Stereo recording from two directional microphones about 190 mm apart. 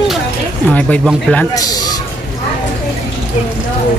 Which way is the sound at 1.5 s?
20° left (ahead or behind).